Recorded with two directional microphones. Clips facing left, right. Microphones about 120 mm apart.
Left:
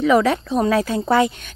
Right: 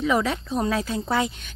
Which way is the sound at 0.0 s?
75° left (ahead or behind).